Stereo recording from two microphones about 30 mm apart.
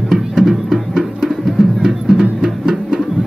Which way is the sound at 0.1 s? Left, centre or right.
Centre.